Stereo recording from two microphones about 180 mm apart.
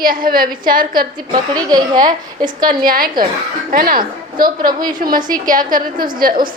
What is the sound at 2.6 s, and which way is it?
A woman's voice, 50° right (ahead or behind).